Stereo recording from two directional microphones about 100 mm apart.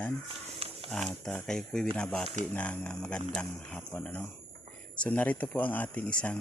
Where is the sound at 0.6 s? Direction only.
75° right (ahead or behind).